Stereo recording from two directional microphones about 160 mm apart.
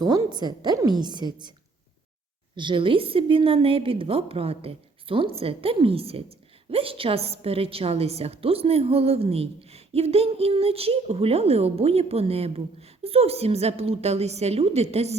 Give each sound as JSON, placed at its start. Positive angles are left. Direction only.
{"t": 0.0, "sound": "a woman's voice", "side_deg": -25}
{"t": 2.6, "sound": "a woman's voice", "side_deg": -30}